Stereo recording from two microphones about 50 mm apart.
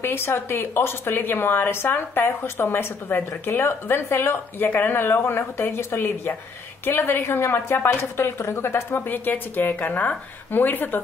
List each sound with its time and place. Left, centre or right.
0.0 s a woman's voice: left
8.5 s speech: left
8.9 s a woman's voice: left